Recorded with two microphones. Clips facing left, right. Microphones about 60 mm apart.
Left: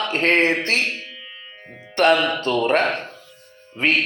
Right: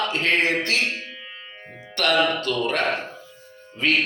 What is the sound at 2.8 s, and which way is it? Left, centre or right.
Speech, centre.